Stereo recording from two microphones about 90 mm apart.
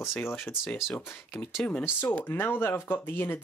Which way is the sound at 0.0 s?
25° left (ahead or behind).